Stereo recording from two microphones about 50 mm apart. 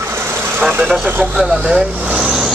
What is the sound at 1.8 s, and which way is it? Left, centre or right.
Speech, right.